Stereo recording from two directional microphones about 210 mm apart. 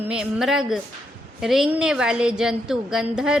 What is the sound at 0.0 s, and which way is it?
A woman's voice, 5° right (ahead or behind).